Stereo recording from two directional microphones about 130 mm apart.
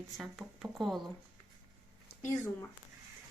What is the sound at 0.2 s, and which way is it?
Speech, centre (ahead or behind).